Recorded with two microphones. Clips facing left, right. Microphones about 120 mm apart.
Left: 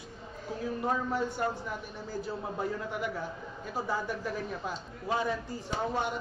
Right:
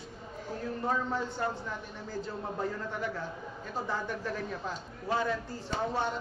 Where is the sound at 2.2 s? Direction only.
10° left (ahead or behind).